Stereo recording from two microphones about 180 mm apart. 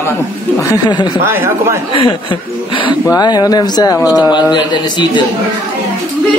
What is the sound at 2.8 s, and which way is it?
Speech, 20° left (ahead or behind).